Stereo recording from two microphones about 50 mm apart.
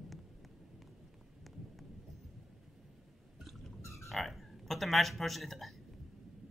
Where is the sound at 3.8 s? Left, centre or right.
Left.